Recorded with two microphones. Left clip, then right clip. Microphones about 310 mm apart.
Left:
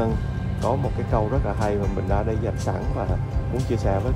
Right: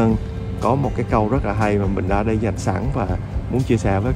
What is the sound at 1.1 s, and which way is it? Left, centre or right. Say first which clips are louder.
Speech: right 5 dB; right.